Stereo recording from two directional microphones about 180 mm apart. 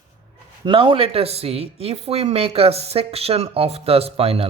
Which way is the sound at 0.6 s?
30° right (ahead or behind).